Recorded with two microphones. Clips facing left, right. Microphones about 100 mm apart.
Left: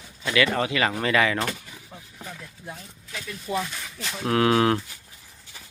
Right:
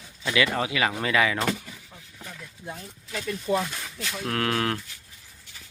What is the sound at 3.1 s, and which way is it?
Speech, 40° right (ahead or behind).